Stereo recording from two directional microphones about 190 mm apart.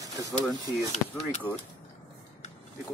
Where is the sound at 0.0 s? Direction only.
20° right (ahead or behind).